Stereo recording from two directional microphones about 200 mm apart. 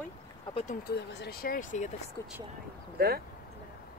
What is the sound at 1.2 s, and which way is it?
Speech, 50° left (ahead or behind).